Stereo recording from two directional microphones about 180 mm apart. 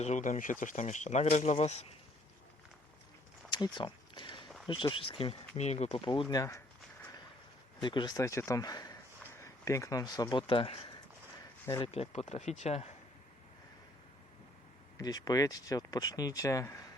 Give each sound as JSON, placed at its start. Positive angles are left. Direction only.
{"t": 0.0, "sound": "speech", "side_deg": 40}
{"t": 3.5, "sound": "a sound", "side_deg": 25}
{"t": 4.6, "sound": "speech", "side_deg": 25}
{"t": 6.2, "sound": "speech", "side_deg": 15}
{"t": 7.8, "sound": "speech", "side_deg": 25}
{"t": 14.9, "sound": "speech", "side_deg": 20}